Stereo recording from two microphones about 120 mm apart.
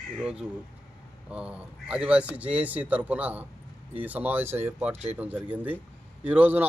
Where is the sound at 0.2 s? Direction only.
10° right (ahead or behind).